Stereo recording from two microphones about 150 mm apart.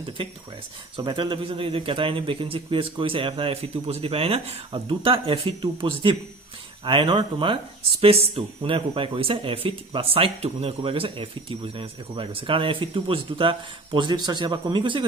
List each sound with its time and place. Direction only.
0.9 s speech: 35° right (ahead or behind)